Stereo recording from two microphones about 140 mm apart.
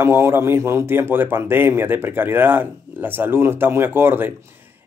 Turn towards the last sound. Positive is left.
turn(degrees=-15)  # may be behind; listen again after turning